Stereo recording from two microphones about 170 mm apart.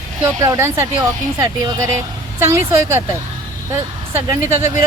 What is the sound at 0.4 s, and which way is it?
Speech, 15° right (ahead or behind).